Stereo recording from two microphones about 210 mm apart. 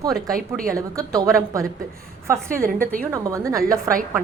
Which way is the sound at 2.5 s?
40° right (ahead or behind).